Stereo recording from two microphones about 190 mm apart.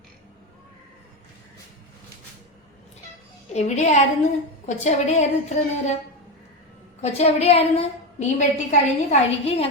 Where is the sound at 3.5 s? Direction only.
35° left (ahead or behind).